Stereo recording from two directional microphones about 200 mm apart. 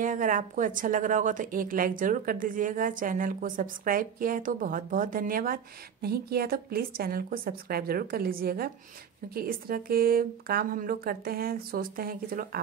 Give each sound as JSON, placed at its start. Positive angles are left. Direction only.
{"t": 0.0, "sound": "a woman's voice", "side_deg": -40}